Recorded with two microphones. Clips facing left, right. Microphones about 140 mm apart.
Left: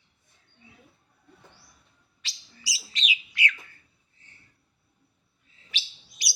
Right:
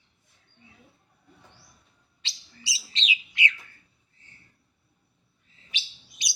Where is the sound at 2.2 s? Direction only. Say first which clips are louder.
Right 2 dB; 25° right (ahead or behind).